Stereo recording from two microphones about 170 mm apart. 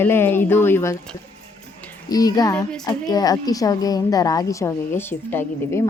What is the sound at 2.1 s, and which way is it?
A woman's voice, 20° left (ahead or behind).